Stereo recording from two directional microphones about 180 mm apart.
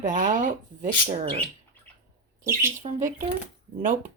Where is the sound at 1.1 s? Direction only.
35° right (ahead or behind).